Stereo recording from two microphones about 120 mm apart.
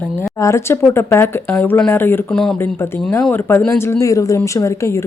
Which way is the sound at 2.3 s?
5° left (ahead or behind).